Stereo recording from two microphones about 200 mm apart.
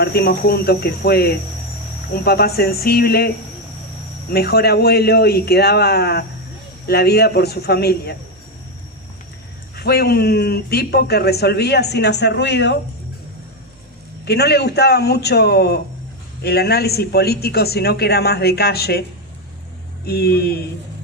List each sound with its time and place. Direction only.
0.0 s speech: 50° left (ahead or behind)
9.7 s speech: 50° left (ahead or behind)
14.3 s speech: 55° left (ahead or behind)
20.1 s speech: 50° left (ahead or behind)